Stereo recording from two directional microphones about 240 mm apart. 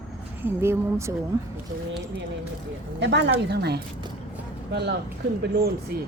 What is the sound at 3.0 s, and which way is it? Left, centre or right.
Speech, right.